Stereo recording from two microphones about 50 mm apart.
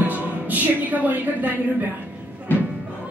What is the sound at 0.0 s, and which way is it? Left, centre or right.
Music, right.